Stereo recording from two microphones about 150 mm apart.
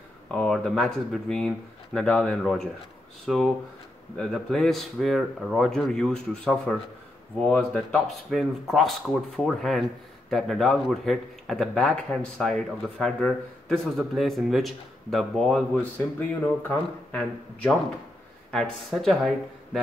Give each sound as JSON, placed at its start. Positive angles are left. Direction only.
{"t": 0.3, "sound": "a man's voice", "side_deg": 5}